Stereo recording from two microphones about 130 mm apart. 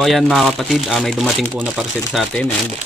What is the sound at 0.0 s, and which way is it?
Speech, centre (ahead or behind).